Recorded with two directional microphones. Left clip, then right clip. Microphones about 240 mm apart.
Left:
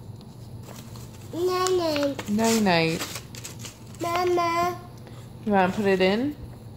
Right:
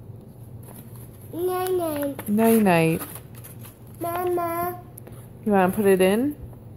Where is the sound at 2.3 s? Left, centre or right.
Right.